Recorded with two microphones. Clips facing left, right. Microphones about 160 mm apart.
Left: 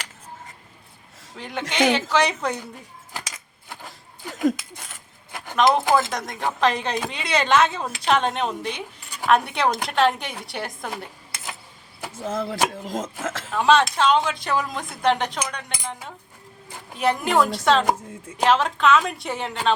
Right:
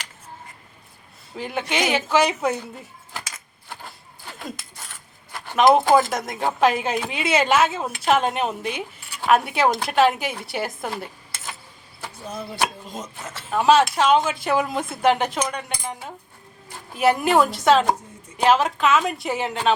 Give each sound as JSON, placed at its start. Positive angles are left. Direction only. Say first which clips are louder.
{"t": 1.4, "sound": "a woman's voice", "louder": "left 1 dB", "side_deg": -5}
{"t": 4.7, "sound": "a sound", "louder": "left 1 dB", "side_deg": 15}
{"t": 6.1, "sound": "a woman's voice", "louder": "right 2 dB", "side_deg": -5}
{"t": 12.2, "sound": "speech", "louder": "left 3 dB", "side_deg": 90}
{"t": 13.5, "sound": "a woman's voice", "louder": "right 2 dB", "side_deg": -5}